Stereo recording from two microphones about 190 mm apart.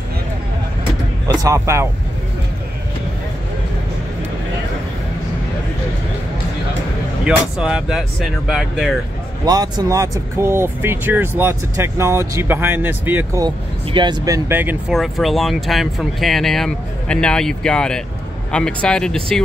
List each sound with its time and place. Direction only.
1.2 s speech: 20° right (ahead or behind)
7.2 s speech: 5° right (ahead or behind)
9.4 s speech: 20° right (ahead or behind)
13.9 s speech: 25° right (ahead or behind); by 19.4 s 5° left (ahead or behind)